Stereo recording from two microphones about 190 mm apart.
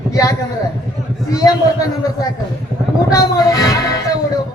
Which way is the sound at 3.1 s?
20° left (ahead or behind).